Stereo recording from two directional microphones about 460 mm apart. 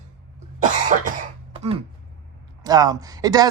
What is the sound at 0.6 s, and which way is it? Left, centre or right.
Cough, centre.